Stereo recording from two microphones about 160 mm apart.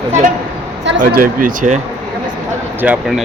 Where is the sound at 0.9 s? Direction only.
65° right (ahead or behind).